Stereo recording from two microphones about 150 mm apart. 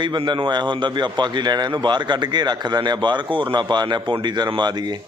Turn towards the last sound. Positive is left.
turn(degrees=-30)  # may be behind; listen again after turning